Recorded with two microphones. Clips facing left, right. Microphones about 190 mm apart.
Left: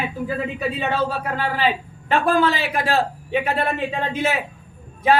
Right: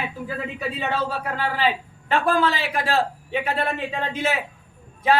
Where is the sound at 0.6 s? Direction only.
20° left (ahead or behind).